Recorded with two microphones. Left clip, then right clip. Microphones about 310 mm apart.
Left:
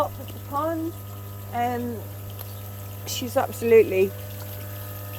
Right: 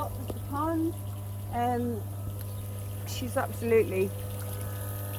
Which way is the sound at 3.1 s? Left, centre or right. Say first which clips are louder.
Left 7 dB; centre.